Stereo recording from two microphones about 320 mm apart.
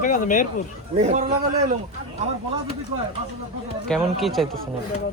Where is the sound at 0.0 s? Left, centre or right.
Left.